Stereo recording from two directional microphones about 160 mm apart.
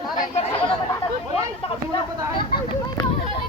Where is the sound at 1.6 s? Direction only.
35° left (ahead or behind).